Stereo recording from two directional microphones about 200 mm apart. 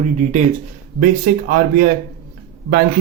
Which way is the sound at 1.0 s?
45° right (ahead or behind).